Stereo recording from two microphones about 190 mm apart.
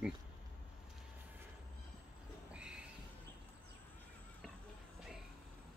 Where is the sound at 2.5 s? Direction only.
5° right (ahead or behind).